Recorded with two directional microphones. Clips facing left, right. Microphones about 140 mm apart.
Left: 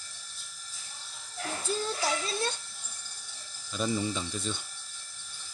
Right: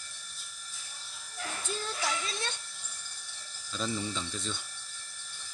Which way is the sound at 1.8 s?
35° left (ahead or behind).